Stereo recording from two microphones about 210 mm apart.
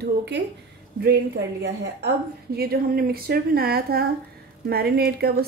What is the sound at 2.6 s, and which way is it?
A woman's voice, 45° right (ahead or behind).